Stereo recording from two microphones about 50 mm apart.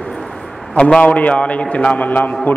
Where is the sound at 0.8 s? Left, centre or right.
Centre.